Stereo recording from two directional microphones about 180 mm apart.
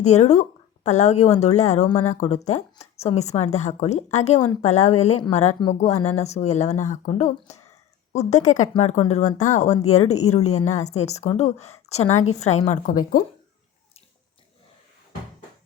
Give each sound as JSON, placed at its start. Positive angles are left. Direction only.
{"t": 0.0, "sound": "speech", "side_deg": 40}
{"t": 5.5, "sound": "speech", "side_deg": 25}
{"t": 6.1, "sound": "speech", "side_deg": 40}